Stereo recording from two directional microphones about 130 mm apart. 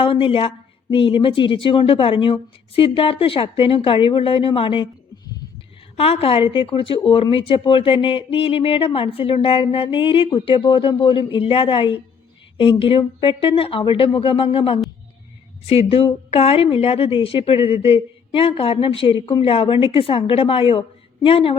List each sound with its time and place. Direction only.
0.0 s speech: 45° left (ahead or behind)
6.0 s speech: 45° left (ahead or behind)